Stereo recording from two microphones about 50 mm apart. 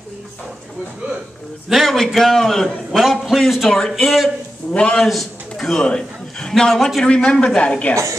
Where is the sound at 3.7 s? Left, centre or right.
Centre.